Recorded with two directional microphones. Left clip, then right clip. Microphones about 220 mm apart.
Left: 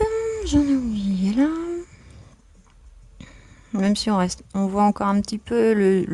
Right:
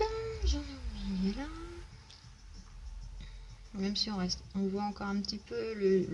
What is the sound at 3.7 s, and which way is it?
Speech, 40° left (ahead or behind).